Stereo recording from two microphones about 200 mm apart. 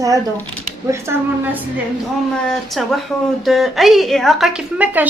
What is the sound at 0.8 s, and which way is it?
Speech, 10° right (ahead or behind).